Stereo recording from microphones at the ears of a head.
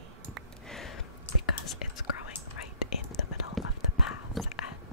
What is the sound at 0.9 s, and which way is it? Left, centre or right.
Whispering, left.